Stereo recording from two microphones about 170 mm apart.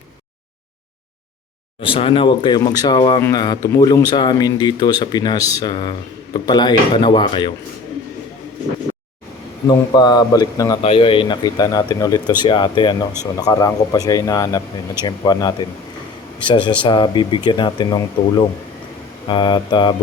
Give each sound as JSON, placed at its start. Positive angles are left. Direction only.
{"t": 1.8, "sound": "speech", "side_deg": 30}
{"t": 9.9, "sound": "speech", "side_deg": 25}